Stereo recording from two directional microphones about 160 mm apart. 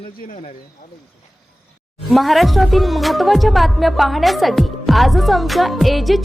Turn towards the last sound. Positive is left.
turn(degrees=0)  # may be behind; listen again after turning